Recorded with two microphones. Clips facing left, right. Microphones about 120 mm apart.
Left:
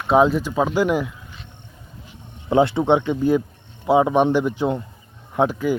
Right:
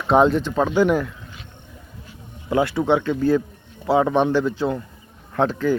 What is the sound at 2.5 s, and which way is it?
Speech, 25° left (ahead or behind).